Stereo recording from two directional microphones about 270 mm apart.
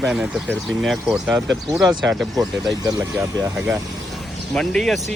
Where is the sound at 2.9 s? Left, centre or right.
Centre.